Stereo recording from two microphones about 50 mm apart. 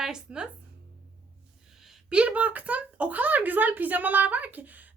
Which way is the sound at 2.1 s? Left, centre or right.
Right.